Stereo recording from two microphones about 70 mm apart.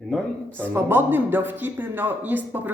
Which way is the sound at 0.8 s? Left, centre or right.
Right.